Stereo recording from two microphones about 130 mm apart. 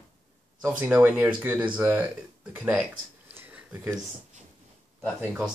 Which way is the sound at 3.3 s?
15° right (ahead or behind).